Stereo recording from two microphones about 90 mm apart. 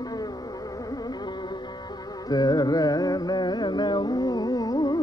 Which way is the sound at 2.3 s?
50° left (ahead or behind).